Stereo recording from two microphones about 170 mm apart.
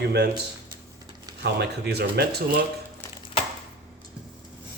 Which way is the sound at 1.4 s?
75° right (ahead or behind).